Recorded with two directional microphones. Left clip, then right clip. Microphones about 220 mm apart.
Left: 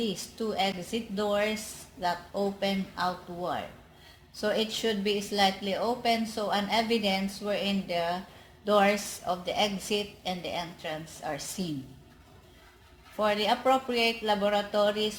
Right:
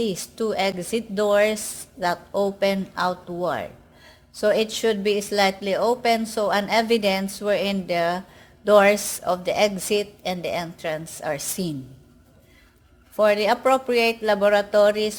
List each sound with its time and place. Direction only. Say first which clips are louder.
0.0 s a woman's voice: right 7 dB; 50° right (ahead or behind)
13.1 s a woman's voice: right 8 dB; 50° right (ahead or behind)